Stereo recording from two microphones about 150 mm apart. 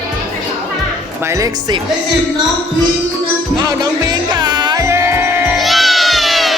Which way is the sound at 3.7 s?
25° right (ahead or behind).